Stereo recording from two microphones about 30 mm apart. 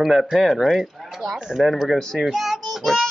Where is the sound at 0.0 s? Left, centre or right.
Centre.